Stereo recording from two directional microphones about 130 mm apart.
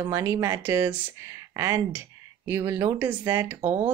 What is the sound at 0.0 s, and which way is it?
Speech, 25° right (ahead or behind).